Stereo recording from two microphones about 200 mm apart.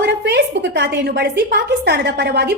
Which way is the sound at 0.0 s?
55° right (ahead or behind).